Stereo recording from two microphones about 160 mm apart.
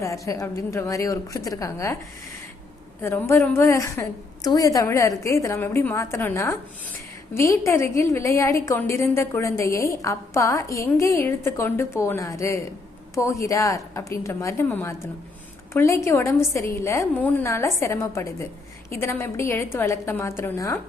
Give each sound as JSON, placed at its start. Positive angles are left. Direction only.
{"t": 0.0, "sound": "a woman's voice", "side_deg": 20}
{"t": 3.0, "sound": "a woman's voice", "side_deg": 15}